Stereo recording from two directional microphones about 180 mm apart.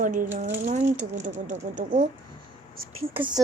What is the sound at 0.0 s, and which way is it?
Speech, 50° right (ahead or behind).